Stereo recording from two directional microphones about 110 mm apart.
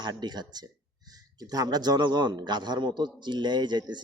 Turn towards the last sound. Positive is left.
turn(degrees=-40)  # may be behind; listen again after turning